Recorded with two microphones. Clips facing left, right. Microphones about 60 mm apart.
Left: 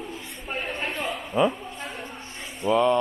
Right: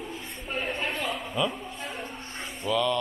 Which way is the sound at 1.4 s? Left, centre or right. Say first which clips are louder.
Left 7 dB; left.